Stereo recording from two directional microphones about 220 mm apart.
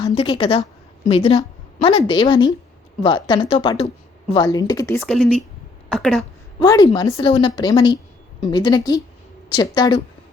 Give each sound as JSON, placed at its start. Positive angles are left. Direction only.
{"t": 0.1, "sound": "a woman's voice", "side_deg": 25}
{"t": 6.6, "sound": "speech", "side_deg": 20}